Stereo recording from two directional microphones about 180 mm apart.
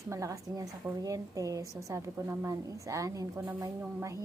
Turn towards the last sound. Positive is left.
turn(degrees=-15)  # may be behind; listen again after turning